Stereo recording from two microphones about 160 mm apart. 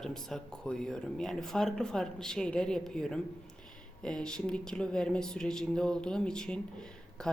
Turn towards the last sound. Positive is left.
turn(degrees=5)  # may be behind; listen again after turning